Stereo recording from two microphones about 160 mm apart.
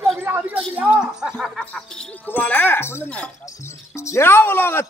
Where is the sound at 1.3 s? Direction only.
10° left (ahead or behind).